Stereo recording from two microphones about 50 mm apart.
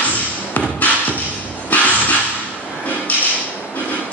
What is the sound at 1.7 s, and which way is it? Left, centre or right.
Music, left.